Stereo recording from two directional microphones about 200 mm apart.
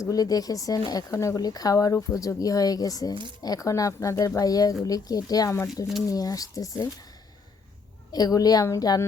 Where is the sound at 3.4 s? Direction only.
15° left (ahead or behind).